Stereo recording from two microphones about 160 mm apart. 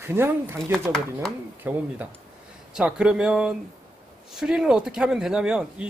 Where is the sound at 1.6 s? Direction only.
10° right (ahead or behind).